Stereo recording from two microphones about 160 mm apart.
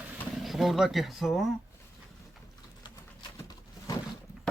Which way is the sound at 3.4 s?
25° left (ahead or behind).